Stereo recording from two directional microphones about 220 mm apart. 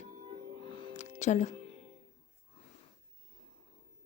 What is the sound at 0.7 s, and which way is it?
Music, 25° left (ahead or behind).